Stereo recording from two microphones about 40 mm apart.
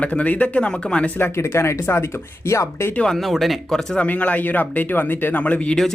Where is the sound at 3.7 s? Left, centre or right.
Centre.